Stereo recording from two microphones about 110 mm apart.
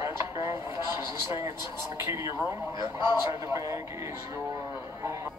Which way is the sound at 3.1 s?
30° right (ahead or behind).